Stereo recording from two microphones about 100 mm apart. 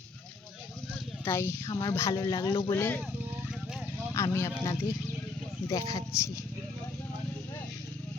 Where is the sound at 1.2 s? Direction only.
25° left (ahead or behind).